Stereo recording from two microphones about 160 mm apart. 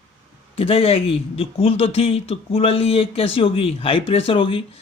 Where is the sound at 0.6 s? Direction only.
35° left (ahead or behind).